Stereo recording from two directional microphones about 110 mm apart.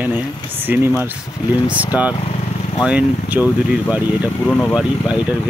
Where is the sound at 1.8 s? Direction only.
15° right (ahead or behind).